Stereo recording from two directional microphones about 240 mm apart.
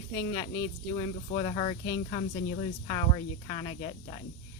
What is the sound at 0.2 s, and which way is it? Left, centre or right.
Speech, centre.